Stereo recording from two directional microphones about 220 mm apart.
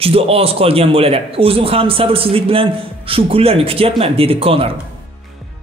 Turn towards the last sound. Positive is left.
turn(degrees=-25)  # may be behind; listen again after turning